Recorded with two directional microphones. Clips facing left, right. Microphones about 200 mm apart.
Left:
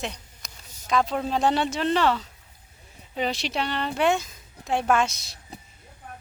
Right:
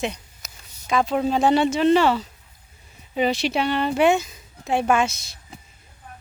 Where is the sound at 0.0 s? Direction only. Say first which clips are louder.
Right 6 dB; 5° right (ahead or behind).